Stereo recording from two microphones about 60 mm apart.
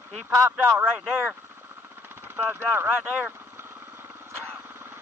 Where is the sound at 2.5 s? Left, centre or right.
Right.